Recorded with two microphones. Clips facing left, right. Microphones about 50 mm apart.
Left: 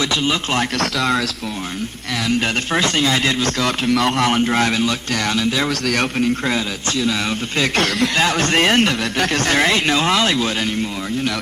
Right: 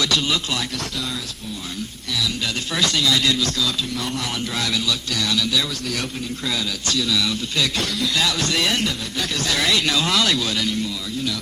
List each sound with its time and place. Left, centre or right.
0.8 s speech: left
2.7 s speech: left
3.8 s a man's voice: left
5.9 s a man's voice: left
6.5 s speech: left
7.8 s a man's voice: left